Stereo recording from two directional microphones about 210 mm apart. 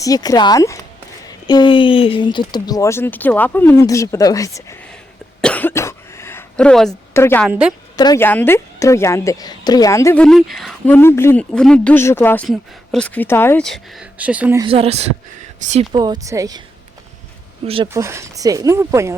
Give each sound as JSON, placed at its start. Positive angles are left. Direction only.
{"t": 0.0, "sound": "speech", "side_deg": 15}
{"t": 5.4, "sound": "cough", "side_deg": 5}
{"t": 7.4, "sound": "speech", "side_deg": -5}
{"t": 7.9, "sound": "speech", "side_deg": 15}
{"t": 10.2, "sound": "speech", "side_deg": 0}
{"t": 14.6, "sound": "speech", "side_deg": -25}
{"t": 17.6, "sound": "speech", "side_deg": -30}
{"t": 17.9, "sound": "speech", "side_deg": -15}